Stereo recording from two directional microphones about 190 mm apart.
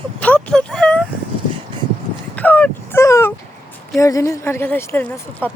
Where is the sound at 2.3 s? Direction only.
10° left (ahead or behind).